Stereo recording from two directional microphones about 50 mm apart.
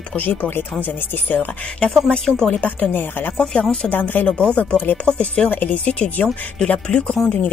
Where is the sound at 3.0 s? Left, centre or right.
Left.